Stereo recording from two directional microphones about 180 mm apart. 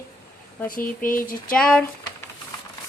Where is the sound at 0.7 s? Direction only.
50° left (ahead or behind).